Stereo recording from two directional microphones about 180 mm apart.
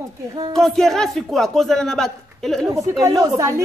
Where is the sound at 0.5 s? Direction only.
Centre (ahead or behind).